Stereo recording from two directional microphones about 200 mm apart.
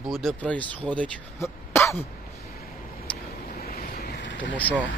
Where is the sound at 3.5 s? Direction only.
50° left (ahead or behind).